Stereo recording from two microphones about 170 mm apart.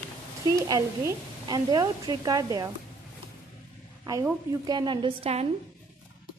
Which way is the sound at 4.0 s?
15° right (ahead or behind).